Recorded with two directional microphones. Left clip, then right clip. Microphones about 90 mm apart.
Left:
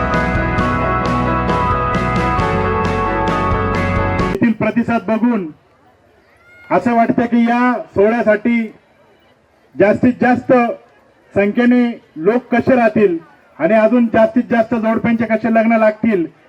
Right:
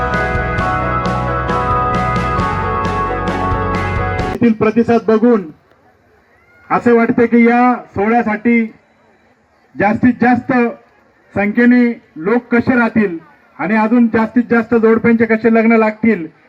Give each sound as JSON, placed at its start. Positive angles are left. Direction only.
{"t": 0.0, "sound": "music", "side_deg": 0}
{"t": 4.4, "sound": "speech", "side_deg": -15}
{"t": 6.7, "sound": "speech", "side_deg": -35}
{"t": 9.7, "sound": "speech", "side_deg": -30}